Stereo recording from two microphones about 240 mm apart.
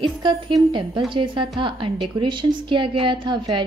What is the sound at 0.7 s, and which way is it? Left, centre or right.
A woman's voice, centre.